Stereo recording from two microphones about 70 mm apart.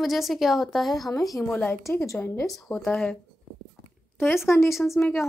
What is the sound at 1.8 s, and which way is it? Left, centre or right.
Speech, left.